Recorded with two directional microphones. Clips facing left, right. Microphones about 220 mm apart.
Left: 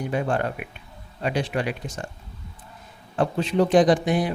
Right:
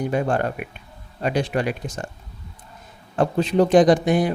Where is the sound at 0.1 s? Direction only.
45° right (ahead or behind).